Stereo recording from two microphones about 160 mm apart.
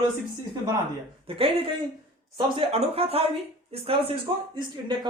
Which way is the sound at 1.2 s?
35° right (ahead or behind).